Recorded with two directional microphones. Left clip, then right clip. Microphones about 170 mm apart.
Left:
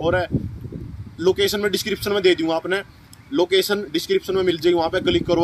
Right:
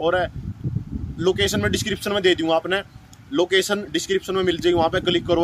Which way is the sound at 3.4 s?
35° right (ahead or behind).